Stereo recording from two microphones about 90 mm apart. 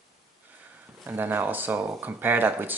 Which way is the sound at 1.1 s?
20° right (ahead or behind).